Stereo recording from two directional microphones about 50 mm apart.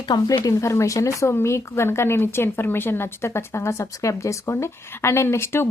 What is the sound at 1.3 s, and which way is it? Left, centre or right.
Speech, left.